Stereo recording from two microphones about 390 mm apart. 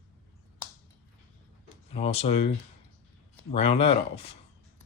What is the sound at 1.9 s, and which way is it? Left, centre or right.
Speech, centre.